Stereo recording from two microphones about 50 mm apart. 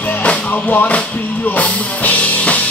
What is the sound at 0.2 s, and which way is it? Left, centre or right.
Music, left.